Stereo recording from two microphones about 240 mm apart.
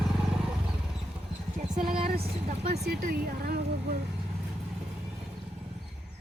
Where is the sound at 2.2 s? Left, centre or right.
Right.